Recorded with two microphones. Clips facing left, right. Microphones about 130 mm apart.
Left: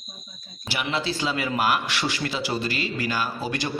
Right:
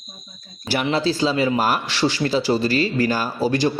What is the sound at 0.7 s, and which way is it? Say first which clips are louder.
Speech: right 7 dB; 40° right (ahead or behind).